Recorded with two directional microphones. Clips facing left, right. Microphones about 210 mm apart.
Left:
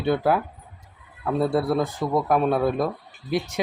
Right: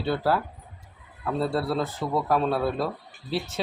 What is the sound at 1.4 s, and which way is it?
Speech, 15° left (ahead or behind).